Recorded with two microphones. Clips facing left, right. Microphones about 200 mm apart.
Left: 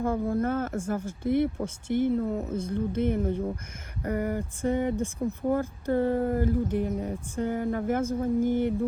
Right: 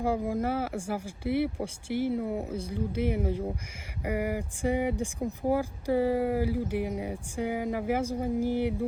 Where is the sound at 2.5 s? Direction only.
50° left (ahead or behind).